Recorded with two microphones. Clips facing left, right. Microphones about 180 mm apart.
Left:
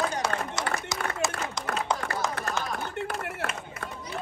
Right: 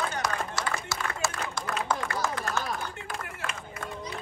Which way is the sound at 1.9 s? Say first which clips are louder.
Even; 20° left (ahead or behind).